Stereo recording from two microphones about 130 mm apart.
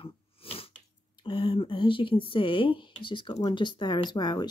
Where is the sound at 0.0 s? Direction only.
45° left (ahead or behind).